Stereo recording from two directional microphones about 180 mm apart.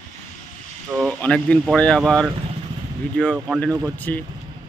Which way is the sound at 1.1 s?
5° left (ahead or behind).